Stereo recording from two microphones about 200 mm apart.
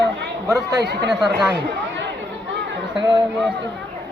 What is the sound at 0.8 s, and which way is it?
Speech, 55° right (ahead or behind).